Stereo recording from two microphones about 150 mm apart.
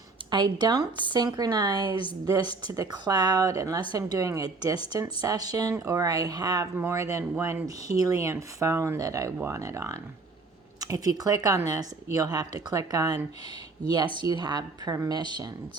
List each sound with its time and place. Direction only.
0.3 s speech: 30° right (ahead or behind)